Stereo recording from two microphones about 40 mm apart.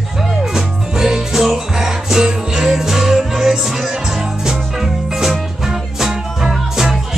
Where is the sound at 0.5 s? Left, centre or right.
Centre.